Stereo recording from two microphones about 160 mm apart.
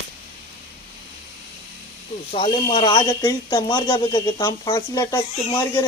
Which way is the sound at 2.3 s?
35° left (ahead or behind).